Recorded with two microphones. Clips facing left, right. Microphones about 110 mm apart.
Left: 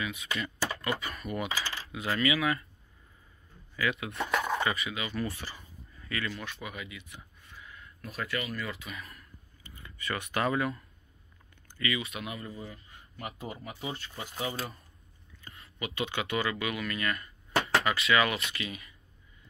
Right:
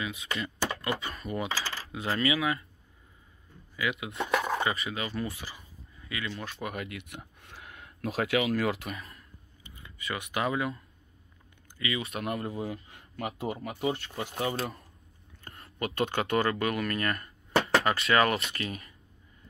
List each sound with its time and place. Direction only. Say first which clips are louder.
0.0 s speech: right 1 dB; 25° right (ahead or behind)
3.7 s speech: left 1 dB; 15° right (ahead or behind)
4.2 s a sound: right 2 dB; 5° right (ahead or behind)
4.6 s speech: right 1 dB; 25° right (ahead or behind)
5.4 s a sound: even; 10° right (ahead or behind)
6.3 s speech: right 1 dB; 30° right (ahead or behind)
6.6 s speech: right 5 dB; 50° right (ahead or behind); by 8.9 s 75° right (ahead or behind)
8.9 s a sound: right 1 dB; 30° right (ahead or behind)
10.3 s speech: left 1 dB; 15° right (ahead or behind)
11.8 s speech: even; 30° right (ahead or behind)
12.2 s speech: right 7 dB; 60° right (ahead or behind)
15.4 s speech: right 5 dB; 50° right (ahead or behind)
17.6 s speech: right 2 dB; 30° right (ahead or behind)